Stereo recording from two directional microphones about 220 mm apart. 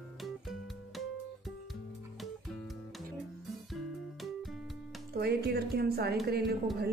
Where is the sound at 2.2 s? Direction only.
Centre (ahead or behind).